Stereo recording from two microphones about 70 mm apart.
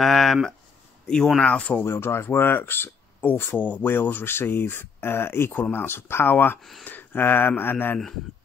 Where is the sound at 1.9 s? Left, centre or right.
Left.